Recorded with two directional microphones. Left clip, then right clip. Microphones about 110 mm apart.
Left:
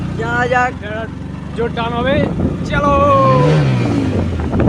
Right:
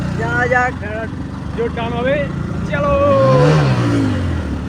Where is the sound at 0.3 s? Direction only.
15° left (ahead or behind).